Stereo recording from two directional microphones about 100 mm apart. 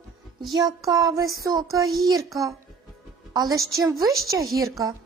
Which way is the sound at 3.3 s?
40° right (ahead or behind).